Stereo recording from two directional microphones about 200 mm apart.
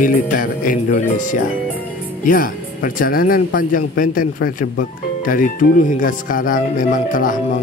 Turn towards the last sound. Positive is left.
turn(degrees=40)  # may be behind; listen again after turning